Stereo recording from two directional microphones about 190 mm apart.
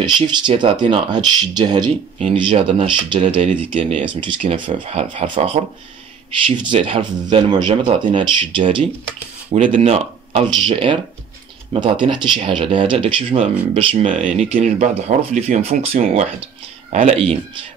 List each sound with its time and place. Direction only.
0.0 s speech: 25° right (ahead or behind)
9.5 s speech: 40° right (ahead or behind)